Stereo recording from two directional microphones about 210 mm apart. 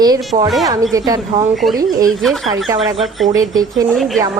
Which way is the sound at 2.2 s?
Centre (ahead or behind).